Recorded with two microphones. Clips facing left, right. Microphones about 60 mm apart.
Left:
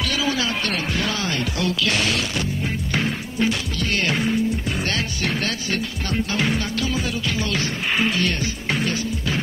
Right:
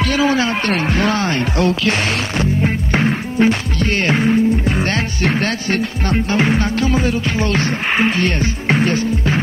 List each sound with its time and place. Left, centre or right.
0.0 s speech: right